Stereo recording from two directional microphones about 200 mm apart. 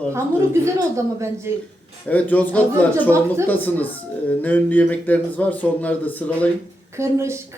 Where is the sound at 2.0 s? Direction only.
10° left (ahead or behind).